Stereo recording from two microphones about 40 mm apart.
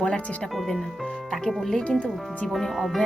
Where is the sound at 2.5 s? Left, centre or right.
Centre.